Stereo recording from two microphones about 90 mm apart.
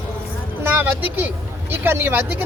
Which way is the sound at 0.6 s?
20° right (ahead or behind).